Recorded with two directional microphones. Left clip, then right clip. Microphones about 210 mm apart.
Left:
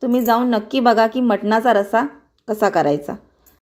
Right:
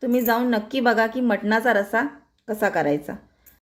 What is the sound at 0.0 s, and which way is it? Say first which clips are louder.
A woman's voice: left 4 dB; 20° left (ahead or behind).